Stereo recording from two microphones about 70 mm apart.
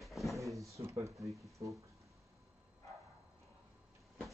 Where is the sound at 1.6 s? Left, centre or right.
Right.